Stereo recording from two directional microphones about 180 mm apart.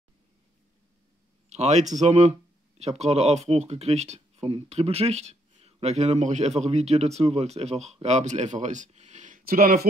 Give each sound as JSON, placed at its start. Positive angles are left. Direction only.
{"t": 1.5, "sound": "speech", "side_deg": -40}